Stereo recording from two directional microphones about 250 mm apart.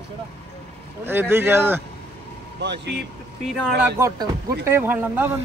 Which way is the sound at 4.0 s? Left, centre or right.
Centre.